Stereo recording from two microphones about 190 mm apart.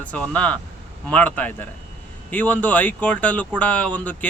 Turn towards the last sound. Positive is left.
turn(degrees=5)  # may be behind; listen again after turning